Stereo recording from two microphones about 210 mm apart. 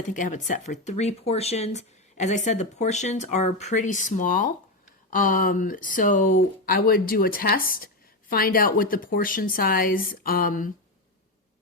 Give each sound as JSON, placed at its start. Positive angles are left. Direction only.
{"t": 0.1, "sound": "speech", "side_deg": 35}